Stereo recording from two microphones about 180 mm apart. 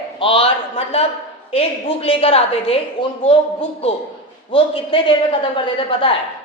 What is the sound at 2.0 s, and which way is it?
Speech, 30° left (ahead or behind).